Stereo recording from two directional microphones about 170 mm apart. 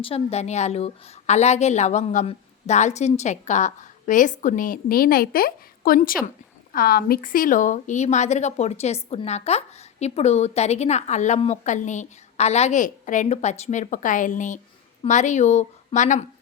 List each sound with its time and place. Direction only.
0.0 s speech: 35° left (ahead or behind)